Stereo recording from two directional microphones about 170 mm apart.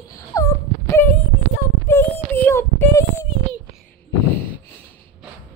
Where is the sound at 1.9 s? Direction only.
10° left (ahead or behind).